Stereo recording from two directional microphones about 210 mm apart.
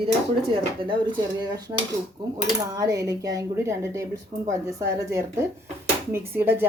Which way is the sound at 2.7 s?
15° right (ahead or behind).